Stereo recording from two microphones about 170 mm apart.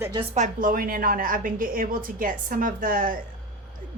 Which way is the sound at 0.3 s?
50° right (ahead or behind).